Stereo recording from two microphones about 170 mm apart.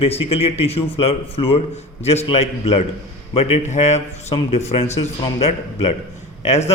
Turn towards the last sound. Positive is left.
turn(degrees=40)  # may be behind; listen again after turning